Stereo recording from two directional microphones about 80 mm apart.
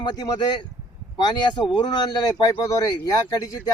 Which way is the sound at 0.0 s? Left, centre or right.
Left.